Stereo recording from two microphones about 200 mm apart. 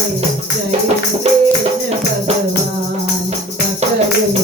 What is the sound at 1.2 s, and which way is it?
Music, 30° right (ahead or behind).